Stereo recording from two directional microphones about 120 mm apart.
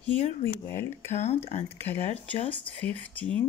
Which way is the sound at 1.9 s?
15° left (ahead or behind).